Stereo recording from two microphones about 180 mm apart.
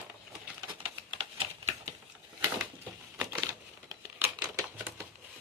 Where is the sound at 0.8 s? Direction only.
30° right (ahead or behind).